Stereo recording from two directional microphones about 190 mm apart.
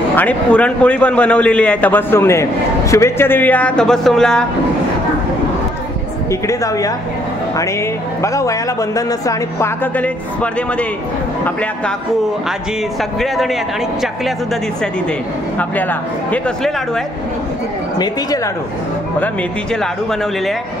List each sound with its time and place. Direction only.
0.1 s a man's voice: 10° left (ahead or behind)
6.4 s a man's voice: 15° left (ahead or behind)
8.2 s a man's voice: 15° left (ahead or behind)
15.7 s a man's voice: 10° left (ahead or behind)
17.9 s speech: 20° left (ahead or behind)
19.1 s speech: 5° left (ahead or behind)